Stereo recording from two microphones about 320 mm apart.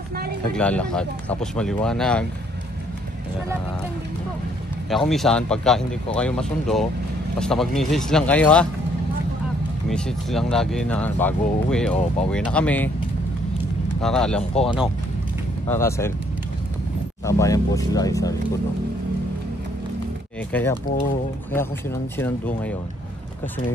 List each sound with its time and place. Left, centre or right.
0.6 s speech: centre
4.8 s speech: centre
9.8 s speech: centre
14.0 s speech: centre
17.3 s speech: centre
20.5 s speech: centre